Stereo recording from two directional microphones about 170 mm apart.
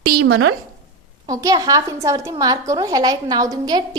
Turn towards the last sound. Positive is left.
turn(degrees=-25)  # may be behind; listen again after turning